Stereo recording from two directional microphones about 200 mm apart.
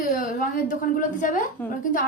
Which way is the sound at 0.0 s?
45° left (ahead or behind).